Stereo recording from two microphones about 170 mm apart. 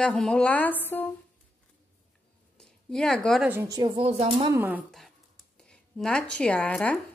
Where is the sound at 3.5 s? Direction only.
20° right (ahead or behind); by 4.5 s 35° right (ahead or behind).